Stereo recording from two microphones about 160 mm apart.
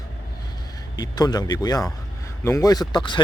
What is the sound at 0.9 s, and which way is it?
Speech, 25° left (ahead or behind).